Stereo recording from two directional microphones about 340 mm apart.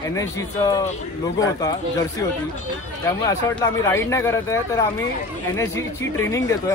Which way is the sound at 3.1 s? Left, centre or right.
Centre.